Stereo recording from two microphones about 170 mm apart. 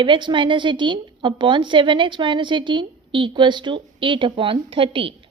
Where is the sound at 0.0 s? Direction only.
25° right (ahead or behind).